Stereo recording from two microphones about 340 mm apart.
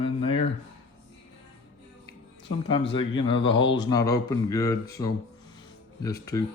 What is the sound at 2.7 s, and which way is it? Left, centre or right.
Speech, centre.